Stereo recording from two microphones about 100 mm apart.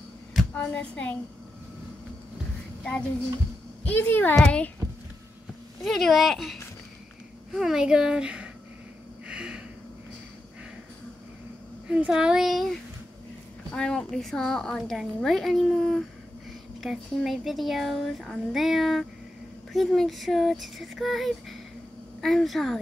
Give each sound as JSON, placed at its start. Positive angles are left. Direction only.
{"t": 0.6, "sound": "a woman's voice", "side_deg": 15}
{"t": 3.8, "sound": "a woman's voice", "side_deg": 20}
{"t": 5.9, "sound": "a child's voice", "side_deg": 0}
{"t": 9.3, "sound": "a sound", "side_deg": -10}
{"t": 11.9, "sound": "speech", "side_deg": -10}
{"t": 13.7, "sound": "a woman's voice", "side_deg": 10}